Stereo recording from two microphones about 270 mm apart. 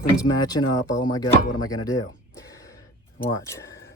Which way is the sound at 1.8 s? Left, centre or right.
Centre.